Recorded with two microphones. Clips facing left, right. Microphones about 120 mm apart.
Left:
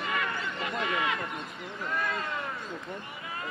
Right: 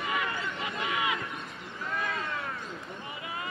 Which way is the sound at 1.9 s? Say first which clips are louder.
Left 1 dB; centre (ahead or behind).